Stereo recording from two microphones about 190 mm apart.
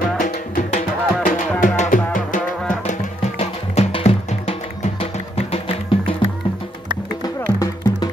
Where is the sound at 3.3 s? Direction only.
35° left (ahead or behind).